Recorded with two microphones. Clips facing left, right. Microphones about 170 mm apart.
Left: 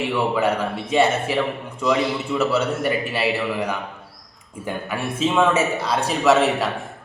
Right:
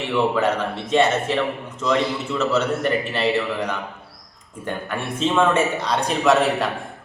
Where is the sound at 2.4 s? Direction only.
10° left (ahead or behind).